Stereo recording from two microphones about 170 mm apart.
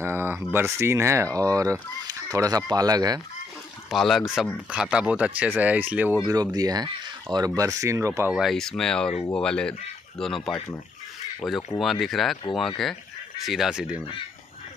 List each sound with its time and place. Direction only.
0.0 s speech: 10° right (ahead or behind)
3.9 s speech: centre (ahead or behind)
6.2 s speech: 20° right (ahead or behind)
8.3 s speech: centre (ahead or behind)
11.4 s speech: 20° left (ahead or behind)
11.8 s speech: centre (ahead or behind)